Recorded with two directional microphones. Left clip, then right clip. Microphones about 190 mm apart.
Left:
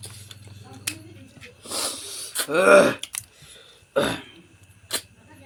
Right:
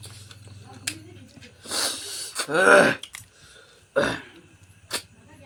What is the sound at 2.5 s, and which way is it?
Speech, 10° right (ahead or behind).